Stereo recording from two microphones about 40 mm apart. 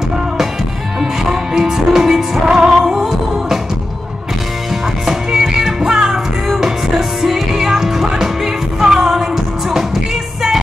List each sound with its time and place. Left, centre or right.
1.3 s music: centre
2.7 s music: centre
5.0 s music: centre